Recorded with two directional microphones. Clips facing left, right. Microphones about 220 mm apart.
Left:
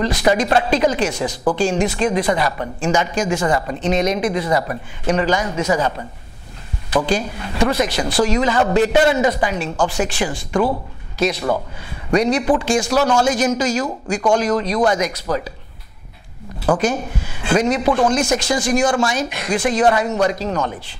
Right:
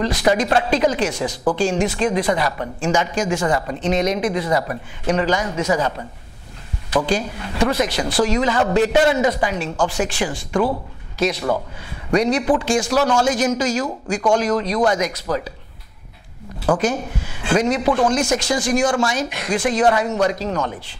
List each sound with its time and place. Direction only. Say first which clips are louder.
0.0 s a woman's voice: left 1 dB; 10° left (ahead or behind)
3.8 s speech: left 1 dB; 55° left (ahead or behind)
4.2 s a woman's voice: left 1 dB; 20° left (ahead or behind)
7.1 s speech: left 1 dB; 15° left (ahead or behind)
12.3 s speech: left 1 dB; 20° left (ahead or behind)
13.0 s a woman's voice: left 1 dB; 25° left (ahead or behind)
13.3 s a woman's voice: left 1 dB; 10° left (ahead or behind)
16.6 s speech: left 1 dB; 20° left (ahead or behind)
18.4 s speech: left 1 dB; 10° left (ahead or behind)
18.9 s a woman's voice: left 1 dB; 25° left (ahead or behind)
19.1 s a woman's voice: left 1 dB; 15° left (ahead or behind)